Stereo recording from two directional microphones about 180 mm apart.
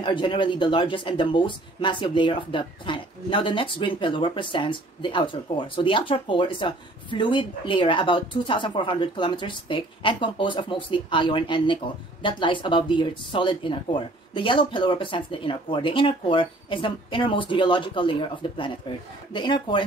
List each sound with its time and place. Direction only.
0.0 s speech: 25° left (ahead or behind)